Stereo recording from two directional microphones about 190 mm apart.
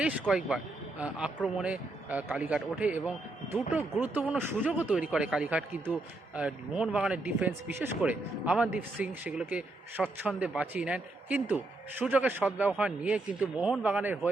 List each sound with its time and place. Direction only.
0.0 s a man's voice: 5° right (ahead or behind)